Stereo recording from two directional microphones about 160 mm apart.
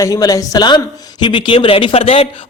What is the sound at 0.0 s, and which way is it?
A man's voice, 20° left (ahead or behind).